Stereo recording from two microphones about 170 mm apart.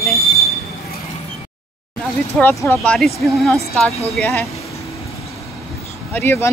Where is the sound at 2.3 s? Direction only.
10° left (ahead or behind).